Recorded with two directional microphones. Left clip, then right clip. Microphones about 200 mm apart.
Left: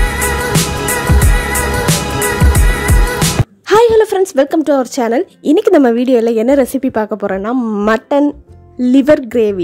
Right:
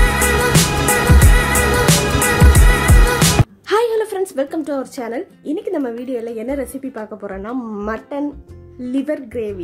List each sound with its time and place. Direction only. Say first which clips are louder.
0.2 s music: left 1 dB; centre (ahead or behind)
3.7 s a woman's voice: left 8 dB; 35° left (ahead or behind)